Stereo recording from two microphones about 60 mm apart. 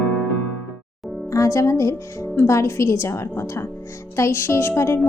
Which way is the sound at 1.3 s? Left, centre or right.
Left.